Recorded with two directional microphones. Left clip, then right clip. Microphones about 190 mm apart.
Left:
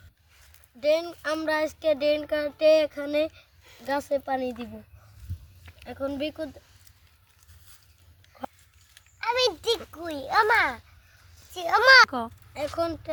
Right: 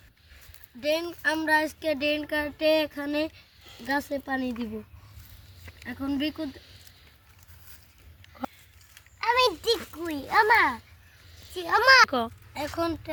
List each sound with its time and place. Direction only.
0.8 s speech: 15° left (ahead or behind)
6.1 s speech: 10° left (ahead or behind)
9.2 s a sound: centre (ahead or behind)
11.3 s a child's voice: 15° left (ahead or behind)
12.1 s speech: centre (ahead or behind)